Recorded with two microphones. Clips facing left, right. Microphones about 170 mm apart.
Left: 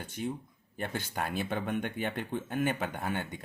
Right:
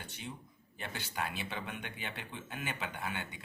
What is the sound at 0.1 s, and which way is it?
Speech, 45° left (ahead or behind).